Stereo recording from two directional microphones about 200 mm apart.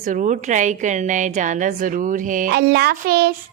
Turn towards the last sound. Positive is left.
turn(degrees=-50)  # may be behind; listen again after turning